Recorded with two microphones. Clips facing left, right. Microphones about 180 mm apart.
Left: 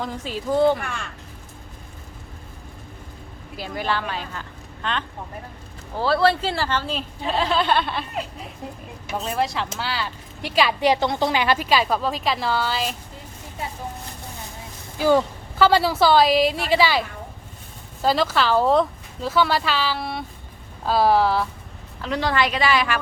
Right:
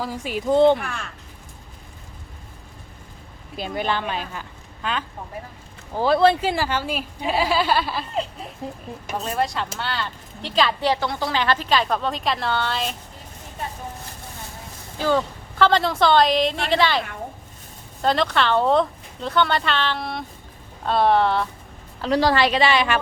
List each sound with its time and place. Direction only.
0.0 s a woman's voice: 10° right (ahead or behind)
0.8 s a woman's voice: centre (ahead or behind)
3.6 s a woman's voice: 20° right (ahead or behind)
6.0 s a woman's voice: 20° right (ahead or behind)
9.2 s a woman's voice: centre (ahead or behind)
14.9 s a woman's voice: 10° left (ahead or behind)
18.0 s a woman's voice: 5° left (ahead or behind)
22.0 s a woman's voice: 35° right (ahead or behind)